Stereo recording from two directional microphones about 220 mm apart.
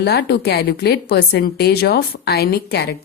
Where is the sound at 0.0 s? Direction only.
50° left (ahead or behind).